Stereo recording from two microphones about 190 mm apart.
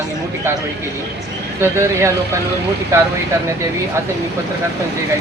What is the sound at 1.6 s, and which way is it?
Speech, 15° right (ahead or behind).